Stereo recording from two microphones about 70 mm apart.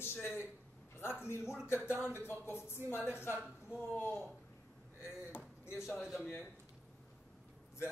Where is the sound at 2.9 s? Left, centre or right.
Right.